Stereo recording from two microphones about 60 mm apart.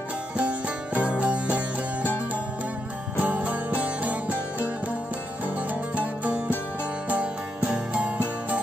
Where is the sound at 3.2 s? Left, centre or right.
Right.